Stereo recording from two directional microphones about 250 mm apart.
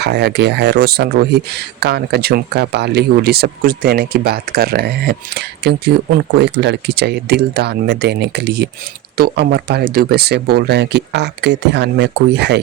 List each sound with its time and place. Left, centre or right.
0.0 s speech: right